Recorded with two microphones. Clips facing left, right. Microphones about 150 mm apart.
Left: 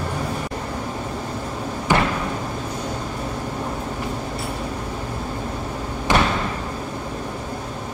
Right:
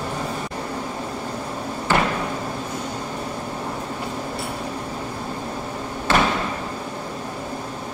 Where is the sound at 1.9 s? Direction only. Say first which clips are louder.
Left 1 dB; 15° left (ahead or behind).